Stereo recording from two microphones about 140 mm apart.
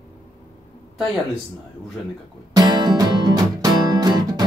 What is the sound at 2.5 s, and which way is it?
Music, 30° right (ahead or behind).